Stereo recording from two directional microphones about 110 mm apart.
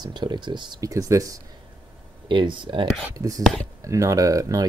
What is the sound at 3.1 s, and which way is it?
Speech, 35° right (ahead or behind).